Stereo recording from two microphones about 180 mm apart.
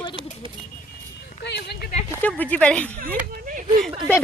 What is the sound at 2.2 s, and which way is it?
Speech, 10° left (ahead or behind).